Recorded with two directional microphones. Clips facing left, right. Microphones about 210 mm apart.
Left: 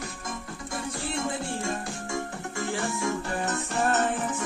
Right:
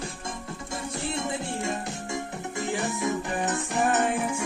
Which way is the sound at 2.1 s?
20° right (ahead or behind).